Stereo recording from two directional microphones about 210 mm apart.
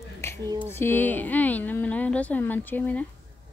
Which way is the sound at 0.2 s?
10° left (ahead or behind).